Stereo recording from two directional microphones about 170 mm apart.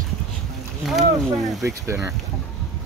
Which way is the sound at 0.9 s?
Centre (ahead or behind).